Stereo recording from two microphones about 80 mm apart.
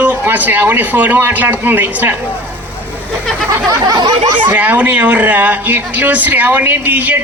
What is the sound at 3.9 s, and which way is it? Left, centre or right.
Speech, right.